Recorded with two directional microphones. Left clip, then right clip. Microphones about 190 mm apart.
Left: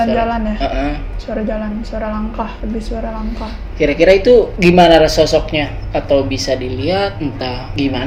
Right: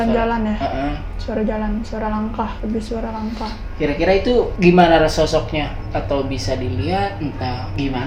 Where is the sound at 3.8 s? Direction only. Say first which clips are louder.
Left 7 dB; 50° left (ahead or behind).